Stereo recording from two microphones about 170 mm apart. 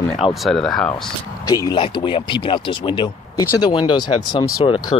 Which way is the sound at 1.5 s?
20° left (ahead or behind).